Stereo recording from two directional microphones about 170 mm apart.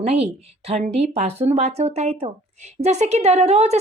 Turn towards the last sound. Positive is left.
turn(degrees=-40)  # may be behind; listen again after turning